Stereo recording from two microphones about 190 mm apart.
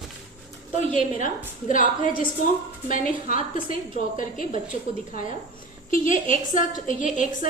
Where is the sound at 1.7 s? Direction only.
45° left (ahead or behind).